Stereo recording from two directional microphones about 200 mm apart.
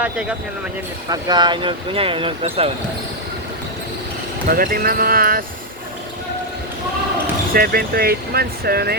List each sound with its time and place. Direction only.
0.0 s speech: 5° right (ahead or behind)
1.1 s speech: 20° right (ahead or behind)
4.4 s speech: 45° right (ahead or behind)
7.5 s speech: 50° right (ahead or behind)